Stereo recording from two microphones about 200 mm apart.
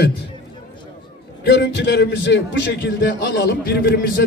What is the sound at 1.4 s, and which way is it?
A man's voice, 60° left (ahead or behind).